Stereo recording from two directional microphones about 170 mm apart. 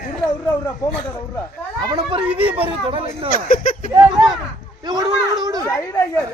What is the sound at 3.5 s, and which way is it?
Speech, 50° left (ahead or behind).